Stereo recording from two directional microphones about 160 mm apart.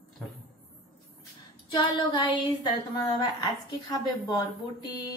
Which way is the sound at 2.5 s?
25° left (ahead or behind).